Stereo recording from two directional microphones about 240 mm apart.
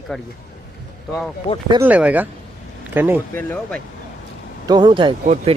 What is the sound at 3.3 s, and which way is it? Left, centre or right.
Speech, centre.